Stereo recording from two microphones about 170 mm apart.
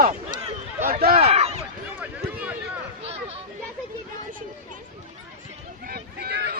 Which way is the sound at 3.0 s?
35° right (ahead or behind).